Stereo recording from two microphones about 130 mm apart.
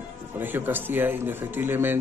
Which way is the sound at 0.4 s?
15° right (ahead or behind).